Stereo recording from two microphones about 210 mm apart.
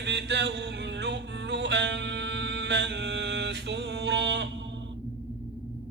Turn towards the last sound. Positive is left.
turn(degrees=-55)  # may be behind; listen again after turning